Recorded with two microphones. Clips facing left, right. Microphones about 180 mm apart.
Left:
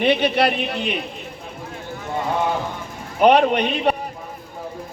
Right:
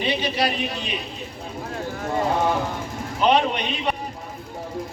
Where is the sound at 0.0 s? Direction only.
60° left (ahead or behind).